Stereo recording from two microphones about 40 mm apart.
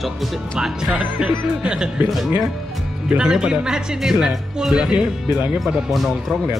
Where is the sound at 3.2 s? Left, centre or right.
Centre.